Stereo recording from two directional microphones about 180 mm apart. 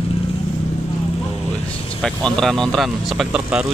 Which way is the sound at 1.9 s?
5° left (ahead or behind).